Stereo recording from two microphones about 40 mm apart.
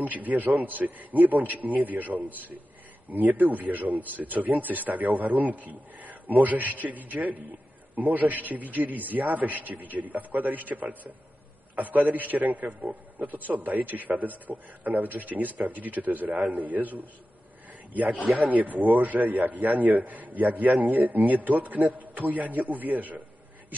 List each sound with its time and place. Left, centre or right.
0.0 s speech: right
18.1 s speech: centre
18.4 s speech: right